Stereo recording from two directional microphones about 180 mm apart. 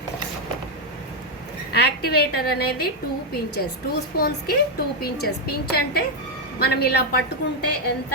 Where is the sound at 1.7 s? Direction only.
60° left (ahead or behind).